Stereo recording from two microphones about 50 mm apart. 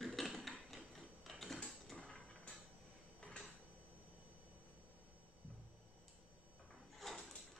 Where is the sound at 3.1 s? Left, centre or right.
Centre.